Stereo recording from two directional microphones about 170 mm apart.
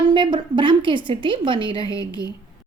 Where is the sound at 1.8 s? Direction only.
20° left (ahead or behind).